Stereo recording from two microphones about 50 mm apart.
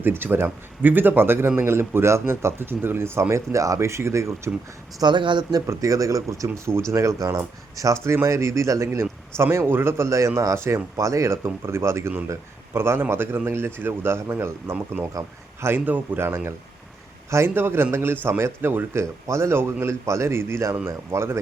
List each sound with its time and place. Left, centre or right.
0.0 s a man's voice: right
3.2 s speech: right
5.6 s speech: right
8.0 s a man's voice: right
9.4 s a man's voice: right
10.1 s speech: right
10.9 s a man's voice: right
12.7 s a man's voice: right
15.9 s speech: right
16.2 s a man's voice: right
19.3 s a man's voice: right
20.8 s a man's voice: right